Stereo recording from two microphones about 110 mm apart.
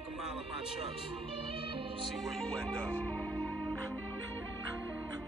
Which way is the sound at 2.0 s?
Centre (ahead or behind).